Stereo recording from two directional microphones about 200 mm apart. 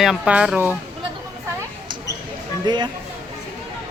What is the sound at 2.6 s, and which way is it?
Speech, 20° right (ahead or behind).